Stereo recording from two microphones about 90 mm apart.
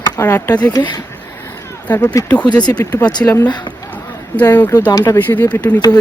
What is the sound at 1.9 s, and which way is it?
Speech, 20° left (ahead or behind).